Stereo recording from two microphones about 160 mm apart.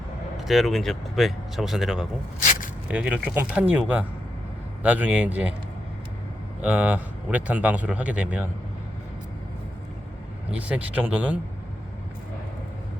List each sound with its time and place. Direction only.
0.3 s speech: centre (ahead or behind)
2.4 s a sound: 55° left (ahead or behind)
2.9 s speech: 5° right (ahead or behind)
6.6 s speech: 10° right (ahead or behind)
10.5 s speech: 10° right (ahead or behind)